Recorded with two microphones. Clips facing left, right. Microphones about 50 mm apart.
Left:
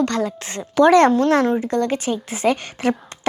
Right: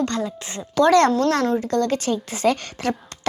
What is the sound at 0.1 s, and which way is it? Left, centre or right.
Speech, left.